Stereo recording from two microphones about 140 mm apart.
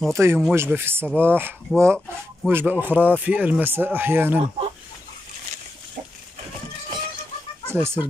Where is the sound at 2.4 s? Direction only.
10° right (ahead or behind).